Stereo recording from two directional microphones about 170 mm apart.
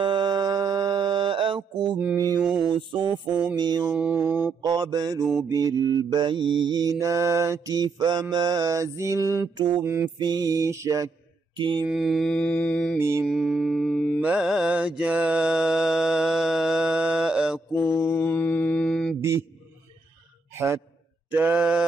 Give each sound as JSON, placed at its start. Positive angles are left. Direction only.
{"t": 0.0, "sound": "music", "side_deg": -25}
{"t": 3.5, "sound": "mantra", "side_deg": -25}
{"t": 3.9, "sound": "mantra", "side_deg": -10}
{"t": 4.6, "sound": "mantra", "side_deg": -25}
{"t": 9.8, "sound": "mantra", "side_deg": -15}
{"t": 11.9, "sound": "mantra", "side_deg": 0}
{"t": 13.2, "sound": "mantra", "side_deg": -5}
{"t": 14.2, "sound": "mantra", "side_deg": -5}
{"t": 17.7, "sound": "mantra", "side_deg": 15}
{"t": 20.5, "sound": "a man's voice", "side_deg": -15}
{"t": 21.3, "sound": "mantra", "side_deg": -10}